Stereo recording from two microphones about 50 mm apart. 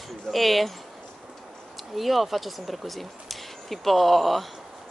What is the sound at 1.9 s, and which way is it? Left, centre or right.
Speech, centre.